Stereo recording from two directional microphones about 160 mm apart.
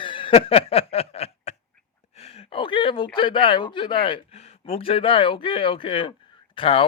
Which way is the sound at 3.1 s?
30° left (ahead or behind).